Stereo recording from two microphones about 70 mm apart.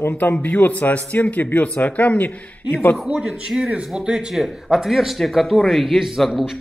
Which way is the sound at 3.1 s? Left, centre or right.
Centre.